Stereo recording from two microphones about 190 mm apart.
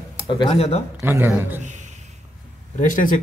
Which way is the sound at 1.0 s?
10° right (ahead or behind).